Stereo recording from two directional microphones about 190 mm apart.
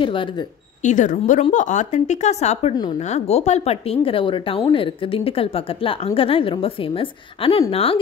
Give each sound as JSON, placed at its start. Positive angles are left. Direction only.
{"t": 0.0, "sound": "speech", "side_deg": 25}
{"t": 0.8, "sound": "a woman's voice", "side_deg": 40}